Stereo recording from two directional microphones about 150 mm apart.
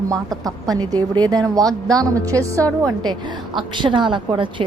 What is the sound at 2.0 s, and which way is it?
A woman's voice, 20° right (ahead or behind).